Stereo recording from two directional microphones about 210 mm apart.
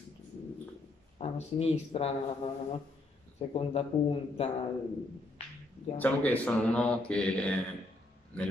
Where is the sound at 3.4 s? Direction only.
30° left (ahead or behind).